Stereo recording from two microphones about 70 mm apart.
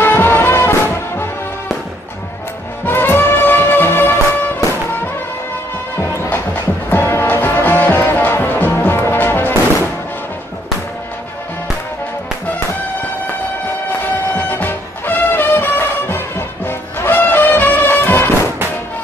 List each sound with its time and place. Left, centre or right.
0.0 s music: left
2.8 s music: left
5.9 s music: left
14.3 s music: left